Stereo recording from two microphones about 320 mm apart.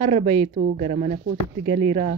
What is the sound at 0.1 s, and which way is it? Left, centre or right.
Speech, centre.